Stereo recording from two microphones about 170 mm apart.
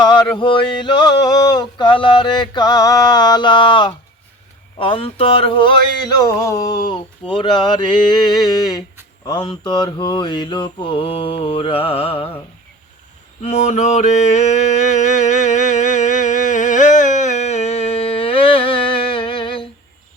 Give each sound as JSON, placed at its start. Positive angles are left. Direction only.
{"t": 0.0, "sound": "male singing", "side_deg": 25}
{"t": 9.2, "sound": "male singing", "side_deg": 25}
{"t": 13.4, "sound": "mantra", "side_deg": 40}